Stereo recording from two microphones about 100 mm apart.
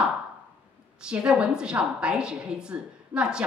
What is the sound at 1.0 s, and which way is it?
A woman's voice, 10° right (ahead or behind).